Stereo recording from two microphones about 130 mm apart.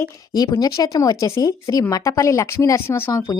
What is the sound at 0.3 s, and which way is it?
Speech, 30° left (ahead or behind).